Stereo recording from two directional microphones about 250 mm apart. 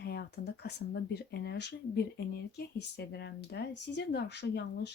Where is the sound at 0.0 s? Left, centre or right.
Left.